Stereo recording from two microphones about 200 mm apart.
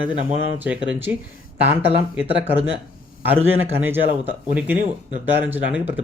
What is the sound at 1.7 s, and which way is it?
Speech, 10° right (ahead or behind).